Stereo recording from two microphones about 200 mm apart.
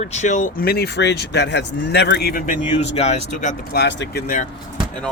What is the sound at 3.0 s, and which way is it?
Speech, 35° left (ahead or behind).